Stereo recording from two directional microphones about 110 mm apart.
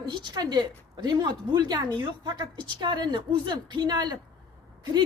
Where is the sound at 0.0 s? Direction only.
45° right (ahead or behind).